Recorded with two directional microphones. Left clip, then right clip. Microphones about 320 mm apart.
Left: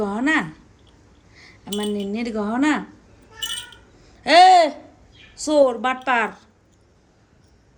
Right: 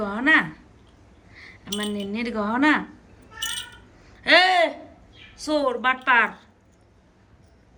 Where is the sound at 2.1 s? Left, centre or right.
Centre.